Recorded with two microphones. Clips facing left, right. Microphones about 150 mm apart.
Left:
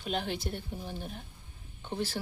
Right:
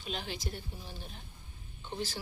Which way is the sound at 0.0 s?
55° left (ahead or behind).